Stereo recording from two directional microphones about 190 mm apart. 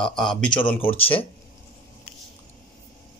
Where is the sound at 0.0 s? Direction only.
Centre (ahead or behind).